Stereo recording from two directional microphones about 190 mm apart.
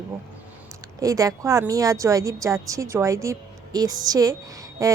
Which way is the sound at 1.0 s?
20° right (ahead or behind).